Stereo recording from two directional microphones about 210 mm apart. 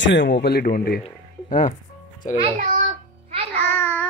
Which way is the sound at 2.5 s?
40° right (ahead or behind).